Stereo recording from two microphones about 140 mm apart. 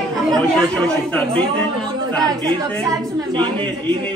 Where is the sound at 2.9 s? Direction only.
25° right (ahead or behind).